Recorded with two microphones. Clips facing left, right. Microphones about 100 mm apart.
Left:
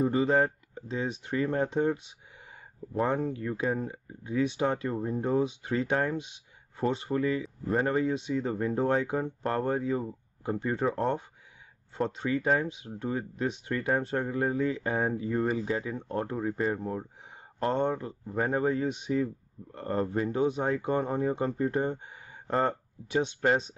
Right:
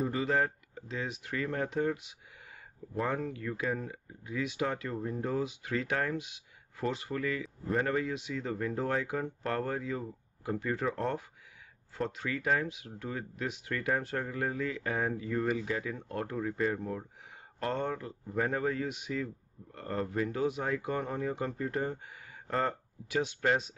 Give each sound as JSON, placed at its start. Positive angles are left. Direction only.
{"t": 0.0, "sound": "speech", "side_deg": 30}
{"t": 11.9, "sound": "speech", "side_deg": 25}